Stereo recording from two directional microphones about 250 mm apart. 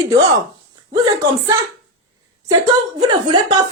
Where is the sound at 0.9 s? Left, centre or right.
Centre.